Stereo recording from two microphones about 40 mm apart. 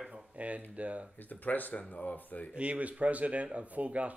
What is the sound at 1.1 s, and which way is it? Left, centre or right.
Speech, left.